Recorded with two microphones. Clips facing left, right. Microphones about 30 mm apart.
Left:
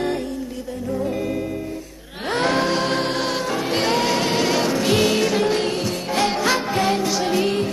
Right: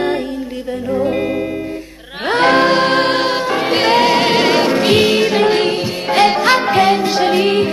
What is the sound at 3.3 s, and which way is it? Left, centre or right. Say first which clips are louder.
Music: right 7 dB; right.